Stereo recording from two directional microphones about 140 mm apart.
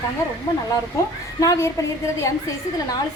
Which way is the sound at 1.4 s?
20° left (ahead or behind).